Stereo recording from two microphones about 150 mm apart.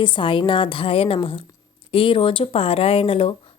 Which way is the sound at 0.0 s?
35° left (ahead or behind).